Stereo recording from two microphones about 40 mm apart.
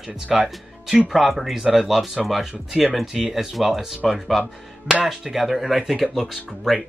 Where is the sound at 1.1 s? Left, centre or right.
Centre.